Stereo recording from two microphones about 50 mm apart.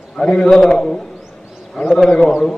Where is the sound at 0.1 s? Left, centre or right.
Centre.